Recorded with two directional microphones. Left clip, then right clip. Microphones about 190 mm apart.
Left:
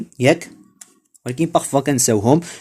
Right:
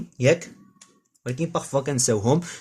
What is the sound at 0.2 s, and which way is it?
Speech, 50° left (ahead or behind).